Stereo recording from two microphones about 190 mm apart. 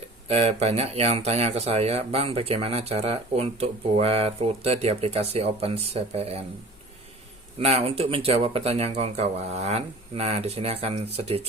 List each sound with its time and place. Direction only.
0.3 s speech: 35° right (ahead or behind)
7.6 s speech: 30° right (ahead or behind)